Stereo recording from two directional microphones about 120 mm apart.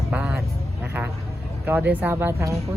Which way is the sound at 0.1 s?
10° right (ahead or behind).